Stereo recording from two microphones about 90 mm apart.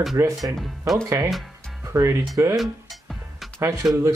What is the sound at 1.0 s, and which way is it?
Speech, 40° right (ahead or behind).